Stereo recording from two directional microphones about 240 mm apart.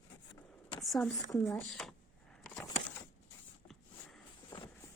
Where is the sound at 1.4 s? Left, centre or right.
Centre.